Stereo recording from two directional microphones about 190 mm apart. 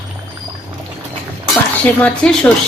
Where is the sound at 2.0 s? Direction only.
5° left (ahead or behind).